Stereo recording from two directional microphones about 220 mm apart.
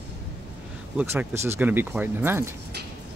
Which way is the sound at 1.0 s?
10° right (ahead or behind).